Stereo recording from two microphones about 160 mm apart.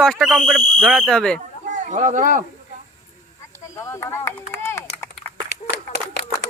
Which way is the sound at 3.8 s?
15° left (ahead or behind).